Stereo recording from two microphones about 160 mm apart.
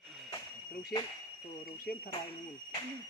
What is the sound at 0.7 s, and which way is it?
Speech, 65° left (ahead or behind).